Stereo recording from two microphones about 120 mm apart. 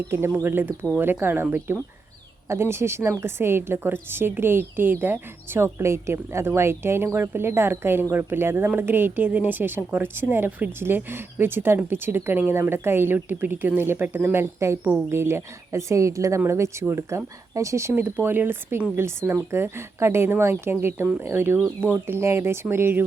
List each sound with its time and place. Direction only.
0.1 s a woman's voice: 20° right (ahead or behind)